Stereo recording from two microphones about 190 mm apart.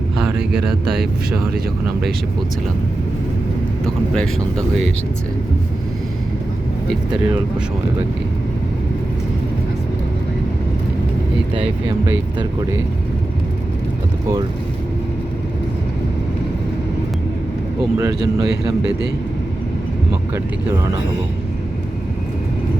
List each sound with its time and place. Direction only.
0.2 s a sound: 5° right (ahead or behind)
3.8 s speech: 5° left (ahead or behind)
17.9 s speech: 20° right (ahead or behind)